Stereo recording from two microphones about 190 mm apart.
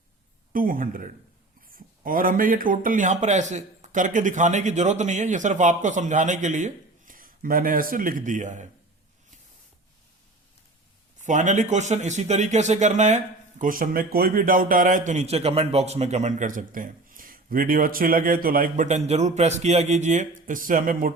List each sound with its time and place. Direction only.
0.5 s speech: 45° right (ahead or behind)
11.2 s speech: 40° right (ahead or behind)